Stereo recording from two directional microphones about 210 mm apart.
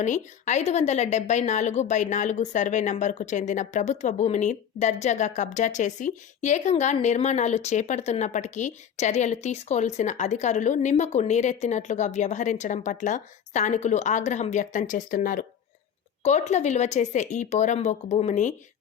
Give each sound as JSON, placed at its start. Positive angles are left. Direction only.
{"t": 0.0, "sound": "a woman's voice", "side_deg": 35}